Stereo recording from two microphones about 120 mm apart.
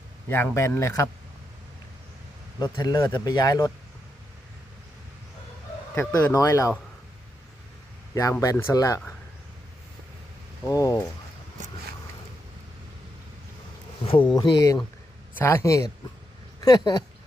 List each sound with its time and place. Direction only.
0.3 s speech: 20° left (ahead or behind)
2.6 s speech: 35° left (ahead or behind)
6.1 s speech: 25° left (ahead or behind)
8.1 s speech: 25° left (ahead or behind)
10.7 s speech: 25° left (ahead or behind)
14.0 s speech: 50° left (ahead or behind)
14.3 s speech: 35° left (ahead or behind)
15.4 s speech: 20° left (ahead or behind)